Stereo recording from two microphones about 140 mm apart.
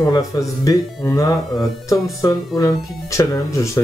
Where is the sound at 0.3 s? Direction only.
25° left (ahead or behind).